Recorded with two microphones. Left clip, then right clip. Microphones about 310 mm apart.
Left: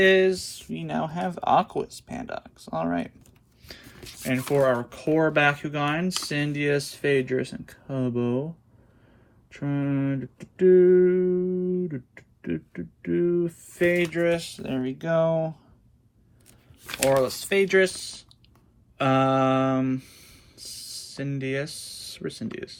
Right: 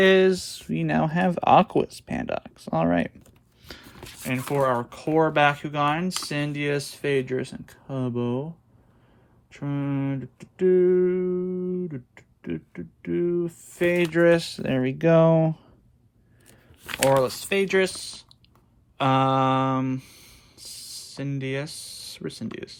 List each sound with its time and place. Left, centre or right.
0.0 s speech: centre
3.7 s speech: centre
9.6 s speech: centre; by 15.6 s right
16.8 s speech: centre
18.9 s a sound: centre